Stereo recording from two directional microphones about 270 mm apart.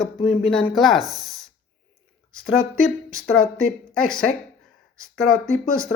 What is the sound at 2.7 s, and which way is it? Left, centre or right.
Speech, left.